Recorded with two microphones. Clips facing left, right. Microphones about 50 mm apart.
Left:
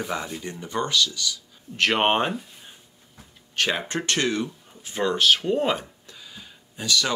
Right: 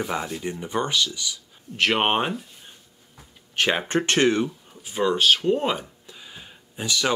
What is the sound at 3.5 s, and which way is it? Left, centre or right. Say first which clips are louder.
Speech: right 2 dB; centre.